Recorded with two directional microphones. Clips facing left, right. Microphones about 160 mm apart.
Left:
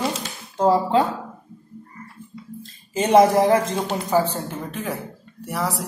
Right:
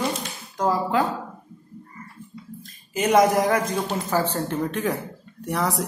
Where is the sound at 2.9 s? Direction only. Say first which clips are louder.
Left 3 dB; 30° left (ahead or behind).